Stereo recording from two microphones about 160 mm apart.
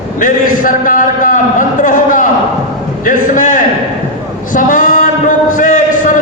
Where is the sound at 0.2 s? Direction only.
55° left (ahead or behind).